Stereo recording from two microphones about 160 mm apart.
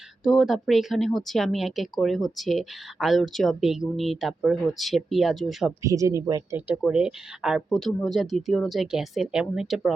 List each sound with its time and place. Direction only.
0.3 s speech: centre (ahead or behind)
5.8 s speech: 20° right (ahead or behind)
6.7 s speech: 5° right (ahead or behind)